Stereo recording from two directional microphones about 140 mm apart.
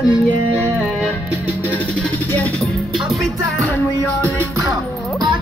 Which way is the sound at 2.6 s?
Centre (ahead or behind).